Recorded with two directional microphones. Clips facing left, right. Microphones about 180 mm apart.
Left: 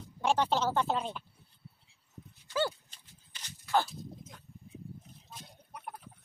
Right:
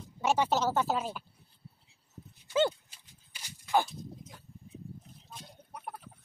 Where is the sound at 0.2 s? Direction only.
10° right (ahead or behind).